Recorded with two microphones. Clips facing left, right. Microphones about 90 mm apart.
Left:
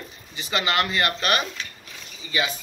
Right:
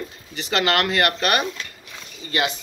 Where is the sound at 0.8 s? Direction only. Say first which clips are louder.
Right 3 dB; 70° right (ahead or behind).